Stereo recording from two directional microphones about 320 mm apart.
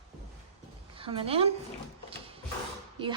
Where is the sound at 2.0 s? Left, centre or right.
Centre.